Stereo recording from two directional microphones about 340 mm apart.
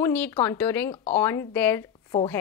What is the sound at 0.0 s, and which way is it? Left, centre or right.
A woman's voice, centre.